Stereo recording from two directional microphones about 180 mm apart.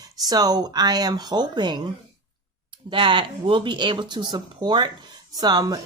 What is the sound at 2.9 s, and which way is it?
Speech, 25° right (ahead or behind).